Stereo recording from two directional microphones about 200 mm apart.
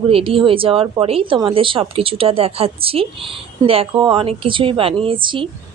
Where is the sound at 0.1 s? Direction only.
25° right (ahead or behind).